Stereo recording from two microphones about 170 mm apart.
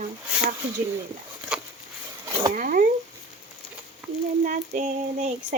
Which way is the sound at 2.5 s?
55° right (ahead or behind).